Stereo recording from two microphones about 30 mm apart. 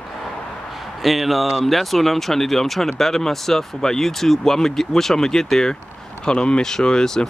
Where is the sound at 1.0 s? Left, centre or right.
Centre.